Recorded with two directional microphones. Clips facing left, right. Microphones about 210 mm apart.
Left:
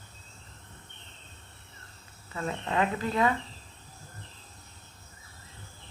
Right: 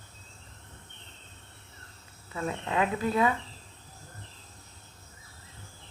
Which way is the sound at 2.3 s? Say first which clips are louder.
Even; 5° right (ahead or behind).